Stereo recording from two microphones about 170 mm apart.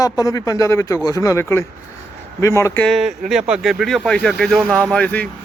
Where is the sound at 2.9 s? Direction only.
Centre (ahead or behind).